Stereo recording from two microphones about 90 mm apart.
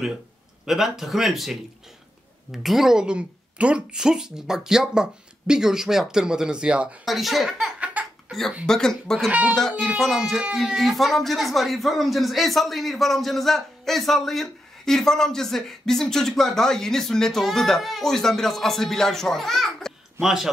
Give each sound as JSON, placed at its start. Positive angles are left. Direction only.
{"t": 0.7, "sound": "a woman's voice", "side_deg": -5}
{"t": 7.1, "sound": "a child's voice", "side_deg": 0}
{"t": 9.3, "sound": "a woman's voice", "side_deg": -15}
{"t": 9.6, "sound": "speech", "side_deg": 5}